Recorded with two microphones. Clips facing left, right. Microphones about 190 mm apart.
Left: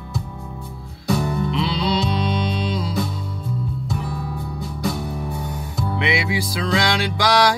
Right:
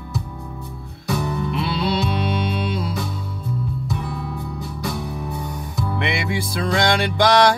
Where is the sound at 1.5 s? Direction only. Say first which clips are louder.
Right 1 dB; 55° right (ahead or behind).